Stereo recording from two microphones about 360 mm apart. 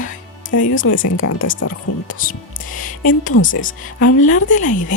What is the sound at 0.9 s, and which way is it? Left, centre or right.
Speech, left.